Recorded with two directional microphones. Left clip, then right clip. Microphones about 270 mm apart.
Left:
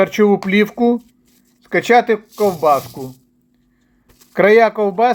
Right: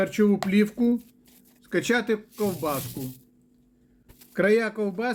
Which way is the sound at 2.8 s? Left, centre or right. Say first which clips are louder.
Left 7 dB; right.